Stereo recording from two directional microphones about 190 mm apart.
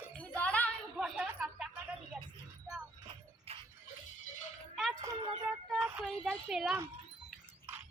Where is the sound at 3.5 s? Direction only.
30° right (ahead or behind).